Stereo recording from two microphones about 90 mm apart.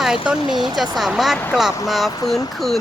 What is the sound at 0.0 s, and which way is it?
A woman's voice, 5° right (ahead or behind).